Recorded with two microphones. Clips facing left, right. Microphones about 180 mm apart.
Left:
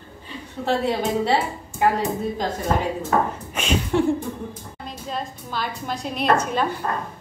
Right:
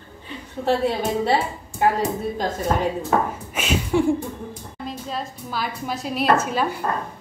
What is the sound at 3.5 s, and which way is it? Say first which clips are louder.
Speech: even; 5° right (ahead or behind).